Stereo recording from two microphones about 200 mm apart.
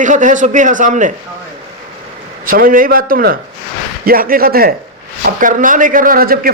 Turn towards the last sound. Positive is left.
turn(degrees=-45)  # may be behind; listen again after turning